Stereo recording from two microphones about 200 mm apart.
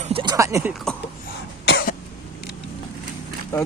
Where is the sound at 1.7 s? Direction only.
55° left (ahead or behind).